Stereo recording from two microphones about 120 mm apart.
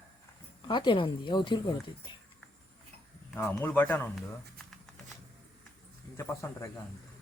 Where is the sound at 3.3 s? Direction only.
20° left (ahead or behind).